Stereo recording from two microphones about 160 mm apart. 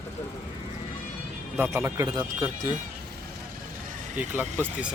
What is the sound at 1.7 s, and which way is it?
Speech, 20° right (ahead or behind).